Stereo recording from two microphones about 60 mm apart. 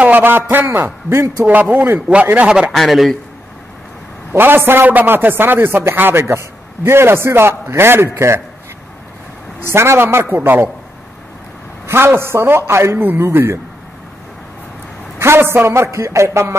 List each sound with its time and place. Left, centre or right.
0.0 s speech: right
1.4 s a man's voice: right
2.7 s a man's voice: centre
4.3 s a man's voice: right
9.6 s speech: right
11.8 s a man's voice: right
15.1 s a man's voice: right